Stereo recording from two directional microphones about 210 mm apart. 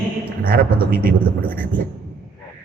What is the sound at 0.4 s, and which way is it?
Speech, 45° right (ahead or behind).